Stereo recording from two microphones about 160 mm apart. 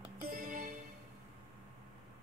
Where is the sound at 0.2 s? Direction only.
60° right (ahead or behind).